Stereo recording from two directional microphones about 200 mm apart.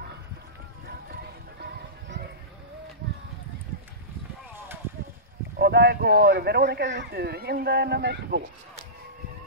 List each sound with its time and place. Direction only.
1.6 s music: 55° right (ahead or behind)
5.6 s speech: 55° right (ahead or behind)